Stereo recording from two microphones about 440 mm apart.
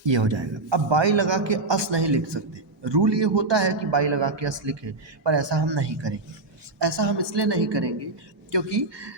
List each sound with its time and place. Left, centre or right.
0.0 s a man's voice: right